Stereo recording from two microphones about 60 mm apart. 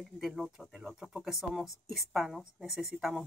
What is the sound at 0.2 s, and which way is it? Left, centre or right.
Speech, centre.